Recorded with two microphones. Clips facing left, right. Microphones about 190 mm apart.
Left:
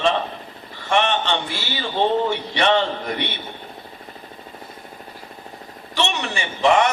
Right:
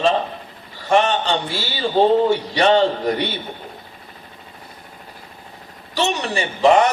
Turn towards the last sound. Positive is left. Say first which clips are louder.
# right 3 dB
turn(degrees=-35)  # may be behind; listen again after turning